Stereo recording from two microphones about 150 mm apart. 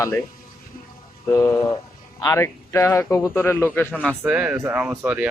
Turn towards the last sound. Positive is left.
turn(degrees=-10)  # may be behind; listen again after turning